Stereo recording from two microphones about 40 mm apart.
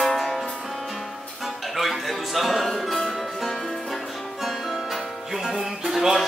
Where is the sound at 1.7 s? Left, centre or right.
Centre.